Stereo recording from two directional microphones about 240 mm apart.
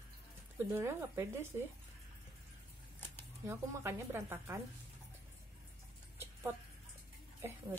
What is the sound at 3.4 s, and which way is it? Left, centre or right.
A woman's voice, centre.